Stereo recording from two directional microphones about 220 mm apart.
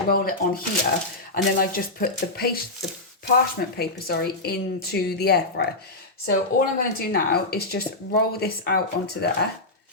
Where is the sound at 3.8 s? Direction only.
45° left (ahead or behind).